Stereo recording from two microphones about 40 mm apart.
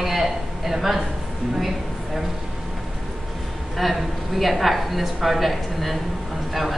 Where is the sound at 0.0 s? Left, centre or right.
Centre.